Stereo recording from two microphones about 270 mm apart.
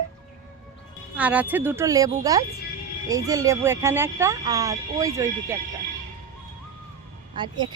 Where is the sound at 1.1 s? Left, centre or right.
Centre.